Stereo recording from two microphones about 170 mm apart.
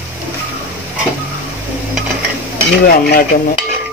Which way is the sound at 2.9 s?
60° left (ahead or behind).